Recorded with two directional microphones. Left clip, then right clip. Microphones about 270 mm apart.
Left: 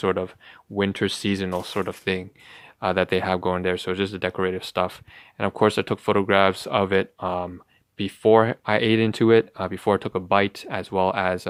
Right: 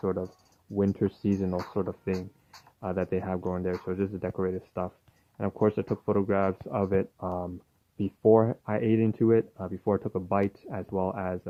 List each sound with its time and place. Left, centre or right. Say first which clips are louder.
0.0 s speech: left 7 dB; left
0.8 s speech: left 5 dB; centre
1.5 s speech: left 5 dB; left